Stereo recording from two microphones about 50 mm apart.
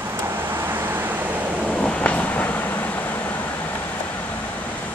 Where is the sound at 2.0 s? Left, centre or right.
Left.